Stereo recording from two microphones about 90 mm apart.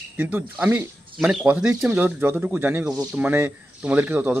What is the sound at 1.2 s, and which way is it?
A man's voice, 10° right (ahead or behind).